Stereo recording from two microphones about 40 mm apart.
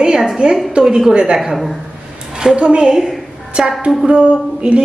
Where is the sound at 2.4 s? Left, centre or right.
Right.